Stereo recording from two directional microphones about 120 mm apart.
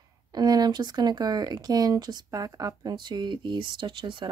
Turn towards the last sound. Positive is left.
turn(degrees=-45)  # may be behind; listen again after turning